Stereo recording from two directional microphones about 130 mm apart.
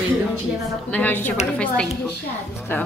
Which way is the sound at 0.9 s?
15° left (ahead or behind).